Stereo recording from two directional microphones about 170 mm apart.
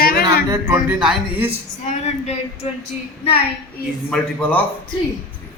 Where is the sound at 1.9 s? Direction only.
40° left (ahead or behind).